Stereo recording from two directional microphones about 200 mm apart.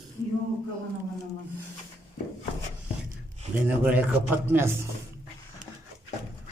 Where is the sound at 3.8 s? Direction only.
5° right (ahead or behind).